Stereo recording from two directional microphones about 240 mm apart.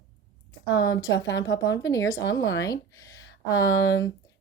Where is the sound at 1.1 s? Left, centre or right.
Left.